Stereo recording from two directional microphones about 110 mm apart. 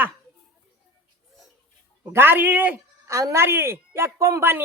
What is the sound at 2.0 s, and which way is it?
Speech, 20° right (ahead or behind).